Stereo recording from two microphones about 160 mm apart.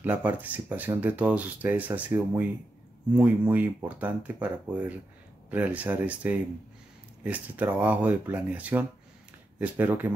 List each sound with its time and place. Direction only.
0.0 s speech: 10° right (ahead or behind)